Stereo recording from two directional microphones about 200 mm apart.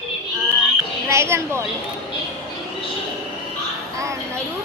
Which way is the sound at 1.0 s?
15° right (ahead or behind).